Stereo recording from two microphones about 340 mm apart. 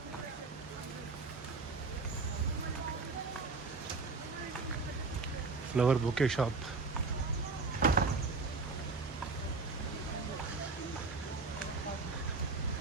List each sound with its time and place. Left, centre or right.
5.7 s speech: centre
7.8 s vehicle: right